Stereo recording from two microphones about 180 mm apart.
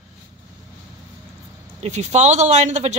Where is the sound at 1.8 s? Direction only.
40° right (ahead or behind).